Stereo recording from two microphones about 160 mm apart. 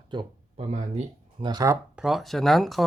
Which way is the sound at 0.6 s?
45° right (ahead or behind).